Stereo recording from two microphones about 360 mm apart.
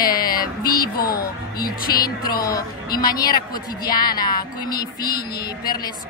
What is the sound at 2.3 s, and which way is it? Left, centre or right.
Speech, centre.